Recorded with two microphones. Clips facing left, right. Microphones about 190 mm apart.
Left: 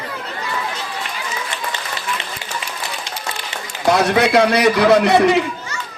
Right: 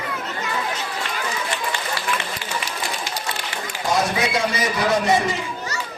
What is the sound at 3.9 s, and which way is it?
A man's voice, 70° left (ahead or behind).